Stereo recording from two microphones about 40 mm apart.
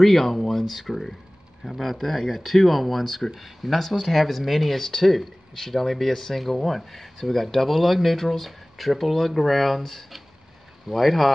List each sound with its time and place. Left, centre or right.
0.0 s speech: centre